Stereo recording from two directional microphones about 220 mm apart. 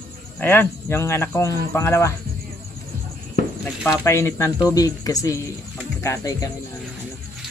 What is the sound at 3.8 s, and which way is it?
Speech, 10° left (ahead or behind).